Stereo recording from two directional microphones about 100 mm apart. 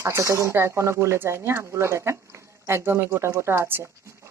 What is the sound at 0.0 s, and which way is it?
Speech, 30° right (ahead or behind).